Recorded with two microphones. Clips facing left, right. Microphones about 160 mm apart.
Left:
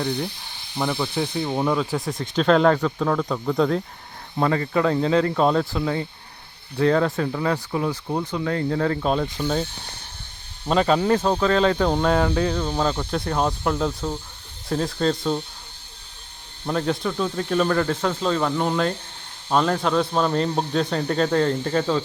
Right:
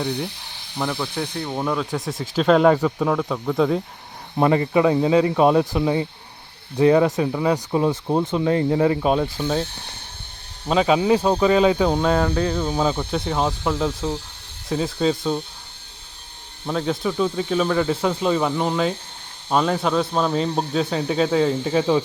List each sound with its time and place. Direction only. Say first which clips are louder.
0.8 s speech: left 1 dB; 5° left (ahead or behind)
4.4 s speech: right 4 dB; 20° right (ahead or behind)
7.7 s speech: right 5 dB; 25° right (ahead or behind); by 9.6 s 5° right (ahead or behind)
10.7 s speech: right 2 dB; 5° right (ahead or behind)
16.6 s speech: right 1 dB; centre (ahead or behind)